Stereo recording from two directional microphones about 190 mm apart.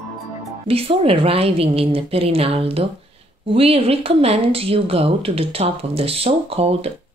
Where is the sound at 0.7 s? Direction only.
30° right (ahead or behind).